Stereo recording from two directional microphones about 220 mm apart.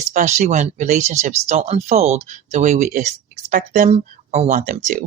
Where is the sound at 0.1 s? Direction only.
35° right (ahead or behind).